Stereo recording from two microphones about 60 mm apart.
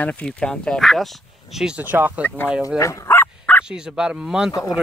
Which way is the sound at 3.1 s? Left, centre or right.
Left.